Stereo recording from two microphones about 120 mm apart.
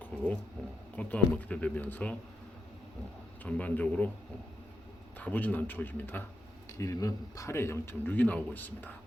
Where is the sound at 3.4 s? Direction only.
10° left (ahead or behind).